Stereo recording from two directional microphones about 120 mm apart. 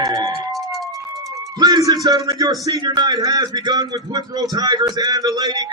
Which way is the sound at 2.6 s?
30° right (ahead or behind).